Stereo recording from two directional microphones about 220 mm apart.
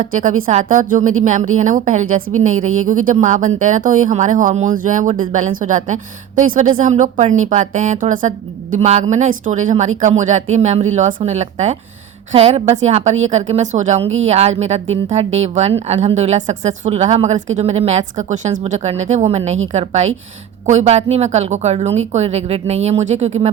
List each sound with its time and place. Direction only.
0.4 s a woman's voice: 35° right (ahead or behind)